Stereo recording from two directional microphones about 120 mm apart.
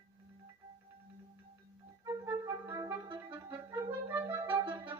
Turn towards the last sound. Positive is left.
turn(degrees=-20)  # may be behind; listen again after turning